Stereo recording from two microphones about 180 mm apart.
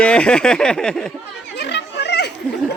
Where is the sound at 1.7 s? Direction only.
70° left (ahead or behind).